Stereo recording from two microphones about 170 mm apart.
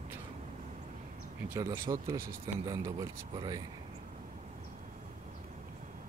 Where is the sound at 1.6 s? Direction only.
20° right (ahead or behind).